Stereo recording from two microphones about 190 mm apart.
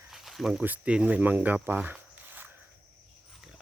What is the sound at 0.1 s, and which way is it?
Speech, centre (ahead or behind).